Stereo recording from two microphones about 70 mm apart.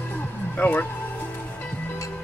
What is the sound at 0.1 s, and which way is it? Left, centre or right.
Music, left.